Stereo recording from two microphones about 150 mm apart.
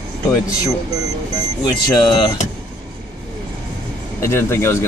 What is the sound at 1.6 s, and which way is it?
Speech, 30° left (ahead or behind).